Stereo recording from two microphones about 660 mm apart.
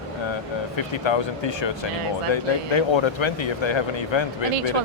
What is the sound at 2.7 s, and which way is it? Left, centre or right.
Speech, left.